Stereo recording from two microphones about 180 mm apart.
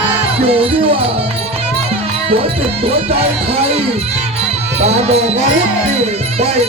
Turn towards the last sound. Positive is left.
turn(degrees=-35)  # may be behind; listen again after turning